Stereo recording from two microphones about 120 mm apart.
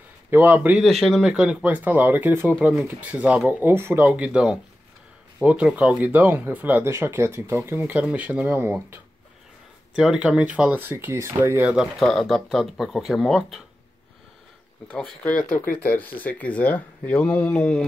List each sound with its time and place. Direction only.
0.3 s speech: 15° right (ahead or behind)
0.8 s speech: centre (ahead or behind); by 9.0 s 15° right (ahead or behind)
9.9 s speech: 5° right (ahead or behind)
12.0 s speech: 5° left (ahead or behind)
14.9 s speech: 5° left (ahead or behind)